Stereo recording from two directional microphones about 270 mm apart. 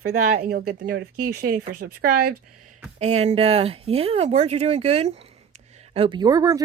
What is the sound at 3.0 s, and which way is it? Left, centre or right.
Speech, right.